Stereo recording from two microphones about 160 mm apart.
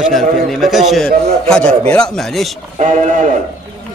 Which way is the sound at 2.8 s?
50° right (ahead or behind).